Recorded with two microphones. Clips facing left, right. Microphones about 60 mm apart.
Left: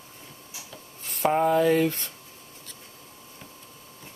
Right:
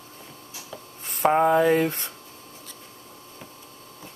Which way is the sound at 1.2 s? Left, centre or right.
Centre.